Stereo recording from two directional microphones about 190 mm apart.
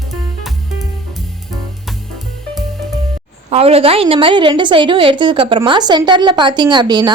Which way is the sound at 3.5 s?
30° right (ahead or behind).